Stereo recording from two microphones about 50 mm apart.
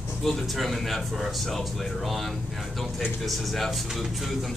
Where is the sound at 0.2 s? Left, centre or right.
Centre.